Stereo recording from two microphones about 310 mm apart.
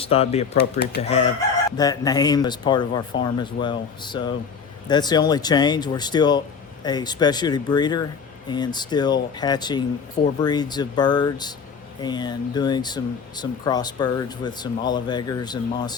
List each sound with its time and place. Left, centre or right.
0.0 s speech: centre
0.5 s speech: left
1.7 s speech: centre